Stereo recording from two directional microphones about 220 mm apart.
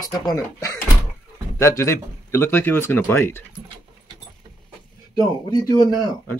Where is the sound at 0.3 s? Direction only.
15° left (ahead or behind).